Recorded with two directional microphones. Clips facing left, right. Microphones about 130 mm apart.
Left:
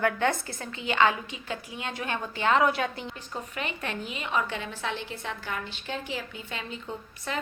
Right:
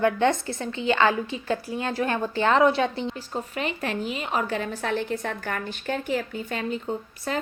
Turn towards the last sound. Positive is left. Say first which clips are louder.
# right 6 dB
turn(degrees=-40)  # may be behind; listen again after turning